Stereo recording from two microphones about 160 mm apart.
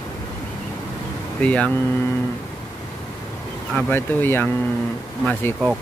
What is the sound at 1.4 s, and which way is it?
Speech, 10° left (ahead or behind).